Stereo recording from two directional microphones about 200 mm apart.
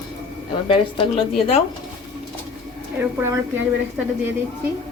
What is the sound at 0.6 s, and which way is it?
Speech, 25° left (ahead or behind).